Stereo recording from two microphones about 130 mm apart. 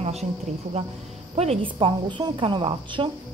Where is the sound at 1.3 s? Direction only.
50° right (ahead or behind).